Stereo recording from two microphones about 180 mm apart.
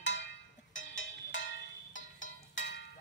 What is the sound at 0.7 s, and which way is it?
Music, 90° left.